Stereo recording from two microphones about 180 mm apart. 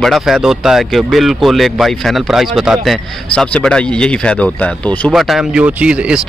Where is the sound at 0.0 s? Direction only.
Centre (ahead or behind).